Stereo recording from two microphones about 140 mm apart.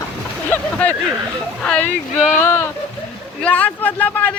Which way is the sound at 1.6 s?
10° left (ahead or behind).